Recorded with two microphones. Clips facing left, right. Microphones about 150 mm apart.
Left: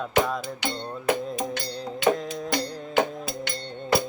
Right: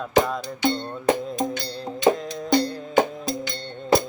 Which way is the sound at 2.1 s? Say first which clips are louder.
Left 4 dB; centre (ahead or behind).